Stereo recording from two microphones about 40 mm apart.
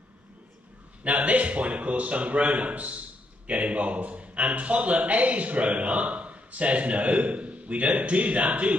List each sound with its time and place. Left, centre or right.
1.0 s a man's voice: right